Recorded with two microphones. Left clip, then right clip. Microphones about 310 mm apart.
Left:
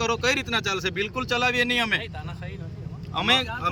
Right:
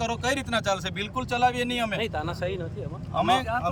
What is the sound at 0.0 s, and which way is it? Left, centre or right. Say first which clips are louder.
Speech: left 4 dB; centre.